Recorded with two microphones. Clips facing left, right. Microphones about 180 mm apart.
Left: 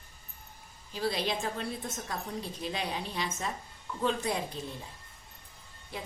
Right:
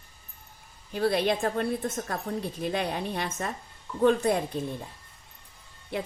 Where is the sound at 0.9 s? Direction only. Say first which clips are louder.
Right 7 dB; 55° right (ahead or behind).